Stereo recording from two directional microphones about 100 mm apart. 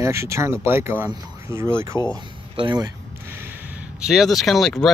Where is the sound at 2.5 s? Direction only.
55° right (ahead or behind).